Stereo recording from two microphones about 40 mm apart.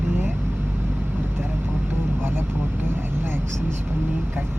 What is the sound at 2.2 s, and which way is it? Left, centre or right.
Vehicle, right.